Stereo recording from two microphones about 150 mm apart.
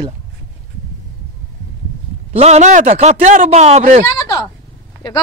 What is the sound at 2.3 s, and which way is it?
Speech, 45° right (ahead or behind).